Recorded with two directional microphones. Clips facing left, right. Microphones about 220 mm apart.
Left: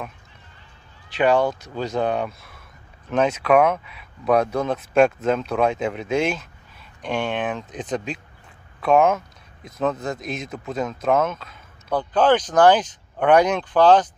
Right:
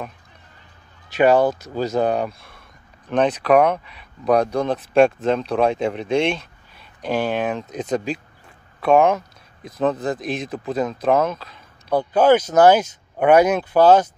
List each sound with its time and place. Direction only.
1.2 s speech: 40° right (ahead or behind)
2.2 s speech: centre (ahead or behind)
4.7 s speech: 30° right (ahead or behind)
5.2 s speech: centre (ahead or behind)
11.9 s speech: 10° right (ahead or behind)